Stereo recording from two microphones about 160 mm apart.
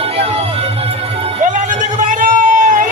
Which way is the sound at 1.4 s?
50° right (ahead or behind).